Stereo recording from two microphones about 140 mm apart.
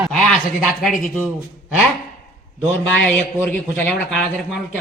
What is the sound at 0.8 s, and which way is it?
Speech, centre (ahead or behind).